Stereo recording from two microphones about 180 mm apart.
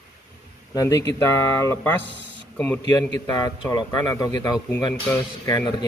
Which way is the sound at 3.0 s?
20° left (ahead or behind).